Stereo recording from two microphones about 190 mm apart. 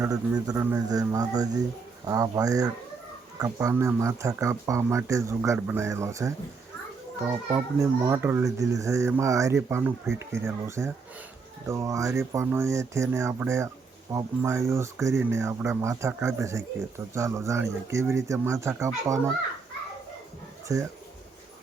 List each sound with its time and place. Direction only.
0.0 s a man's voice: 20° right (ahead or behind)
7.5 s speech: 15° right (ahead or behind)
20.7 s speech: 15° right (ahead or behind)